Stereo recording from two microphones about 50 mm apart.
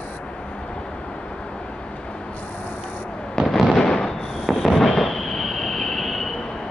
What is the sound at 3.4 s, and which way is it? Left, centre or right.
Fireworks, centre.